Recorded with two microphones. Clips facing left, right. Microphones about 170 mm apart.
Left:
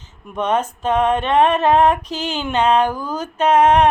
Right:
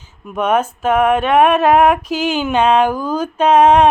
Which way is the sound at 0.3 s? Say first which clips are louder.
Right 3 dB; 10° right (ahead or behind).